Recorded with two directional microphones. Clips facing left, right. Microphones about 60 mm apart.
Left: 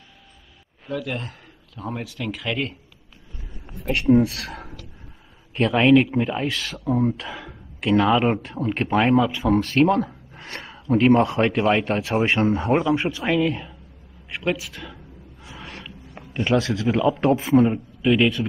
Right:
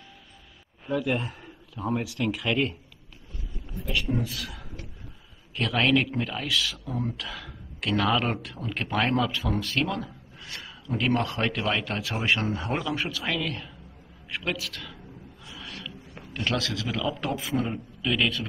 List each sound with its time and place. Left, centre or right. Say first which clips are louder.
0.8 s speech: right 1 dB; centre
3.6 s speech: left 9 dB; left
5.5 s speech: left 8 dB; left
5.8 s speech: left 7 dB; centre
6.4 s speech: left 4 dB; left; by 8.4 s centre
8.4 s speech: left 8 dB; left
9.0 s speech: left 6 dB; centre
9.5 s speech: left 10 dB; left; by 15.0 s centre
15.5 s a sound: left 2 dB; left
16.2 s a man's voice: left 8 dB; centre
17.6 s speech: left 9 dB; centre